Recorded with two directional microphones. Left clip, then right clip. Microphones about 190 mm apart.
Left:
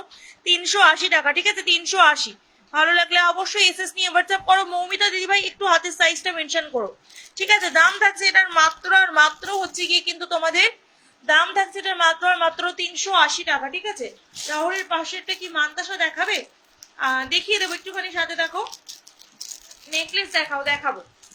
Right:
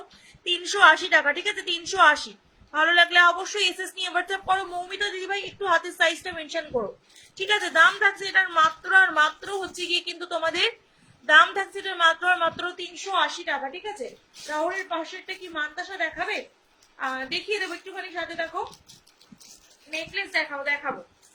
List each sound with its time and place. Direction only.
0.6 s a woman's voice: 10° right (ahead or behind)
19.9 s a woman's voice: centre (ahead or behind)